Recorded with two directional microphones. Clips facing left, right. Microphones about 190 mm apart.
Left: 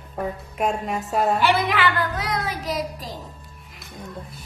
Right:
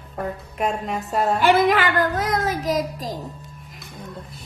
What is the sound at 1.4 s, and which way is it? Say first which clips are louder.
Speech: right 4 dB; 45° right (ahead or behind).